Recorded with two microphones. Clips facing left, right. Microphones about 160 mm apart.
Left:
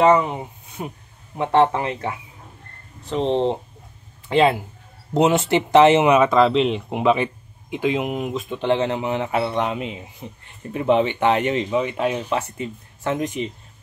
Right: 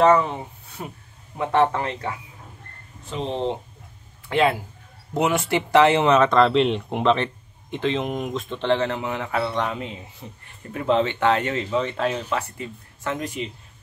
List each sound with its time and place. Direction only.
0.0 s speech: 15° left (ahead or behind)
3.1 s a man's voice: 35° left (ahead or behind); by 8.6 s 5° left (ahead or behind)
8.6 s a man's voice: 20° left (ahead or behind)